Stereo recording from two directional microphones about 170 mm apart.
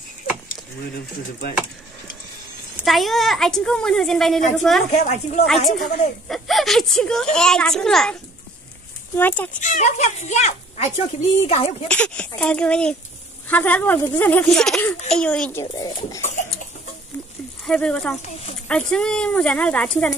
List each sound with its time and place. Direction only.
2.8 s speech: centre (ahead or behind)
5.0 s speech: 45° left (ahead or behind)
5.7 s speech: centre (ahead or behind)
9.6 s speech: 45° left (ahead or behind)
11.9 s speech: 10° left (ahead or behind)
15.6 s speech: 25° left (ahead or behind)
16.2 s a sound: 45° left (ahead or behind)
17.6 s speech: 5° left (ahead or behind)